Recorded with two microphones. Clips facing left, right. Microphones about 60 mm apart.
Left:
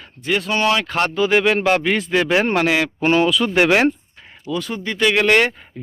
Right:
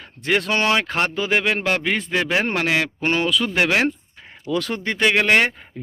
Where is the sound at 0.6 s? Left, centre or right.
Right.